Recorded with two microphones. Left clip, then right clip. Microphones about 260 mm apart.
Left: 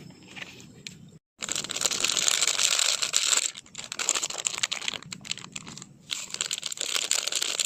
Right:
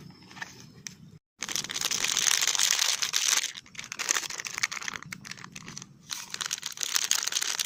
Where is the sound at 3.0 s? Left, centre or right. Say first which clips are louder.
Left 1 dB; right.